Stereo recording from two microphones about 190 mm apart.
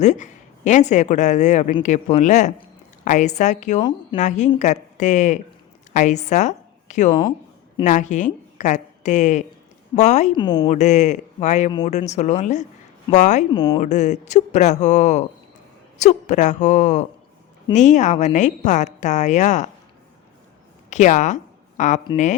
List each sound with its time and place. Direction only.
0.0 s a woman's voice: 40° left (ahead or behind)
10.3 s a woman's voice: 25° left (ahead or behind)
10.7 s speech: 40° left (ahead or behind)
13.5 s a woman's voice: 25° left (ahead or behind)
13.8 s speech: 40° left (ahead or behind)
20.9 s speech: 40° left (ahead or behind)